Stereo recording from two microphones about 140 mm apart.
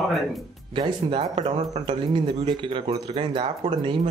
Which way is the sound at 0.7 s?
35° right (ahead or behind).